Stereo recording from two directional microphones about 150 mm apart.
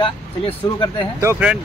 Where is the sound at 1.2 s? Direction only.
20° right (ahead or behind).